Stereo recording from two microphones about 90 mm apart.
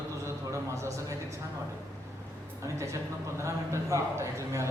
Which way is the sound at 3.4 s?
30° right (ahead or behind).